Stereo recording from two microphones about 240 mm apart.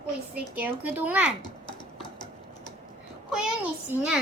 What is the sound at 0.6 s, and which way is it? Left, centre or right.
Speech, centre.